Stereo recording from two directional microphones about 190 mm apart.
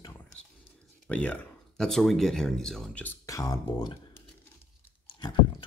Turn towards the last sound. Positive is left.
turn(degrees=25)  # may be behind; listen again after turning